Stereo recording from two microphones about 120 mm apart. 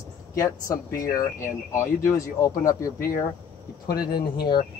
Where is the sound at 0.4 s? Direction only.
25° left (ahead or behind).